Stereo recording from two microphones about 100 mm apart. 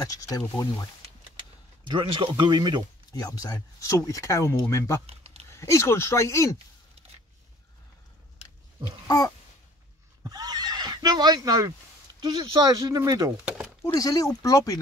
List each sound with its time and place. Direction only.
0.0 s speech: 35° left (ahead or behind)
1.9 s speech: 55° right (ahead or behind)
3.1 s speech: 40° left (ahead or behind)
5.0 s a sound: 90° right
5.5 s speech: 30° left (ahead or behind)
9.0 s a sound: 40° left (ahead or behind)
10.2 s neigh: 40° right (ahead or behind)
12.2 s speech: 45° right (ahead or behind)
13.9 s speech: 35° left (ahead or behind)